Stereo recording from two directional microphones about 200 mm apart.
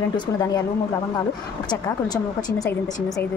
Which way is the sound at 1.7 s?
20° left (ahead or behind).